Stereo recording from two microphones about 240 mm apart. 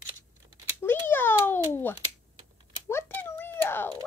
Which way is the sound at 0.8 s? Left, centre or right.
Centre.